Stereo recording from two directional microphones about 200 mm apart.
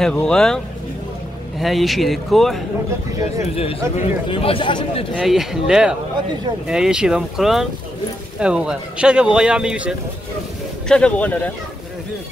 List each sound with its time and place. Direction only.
0.0 s speech: 5° left (ahead or behind)
1.6 s speech: centre (ahead or behind)
3.4 s a man's voice: 30° left (ahead or behind)
5.1 s speech: centre (ahead or behind)